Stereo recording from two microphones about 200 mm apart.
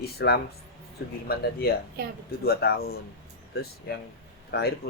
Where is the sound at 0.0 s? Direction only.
50° left (ahead or behind).